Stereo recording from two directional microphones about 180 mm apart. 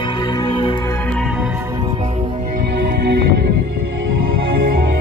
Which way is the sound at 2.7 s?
70° right (ahead or behind).